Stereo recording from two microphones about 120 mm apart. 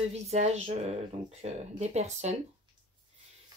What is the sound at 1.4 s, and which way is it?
Speech, 65° right (ahead or behind).